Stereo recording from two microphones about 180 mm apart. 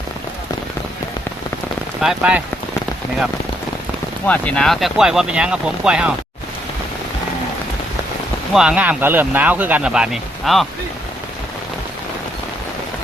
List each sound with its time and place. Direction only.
2.0 s speech: 5° right (ahead or behind)
4.3 s speech: 5° left (ahead or behind)
8.5 s speech: 5° right (ahead or behind)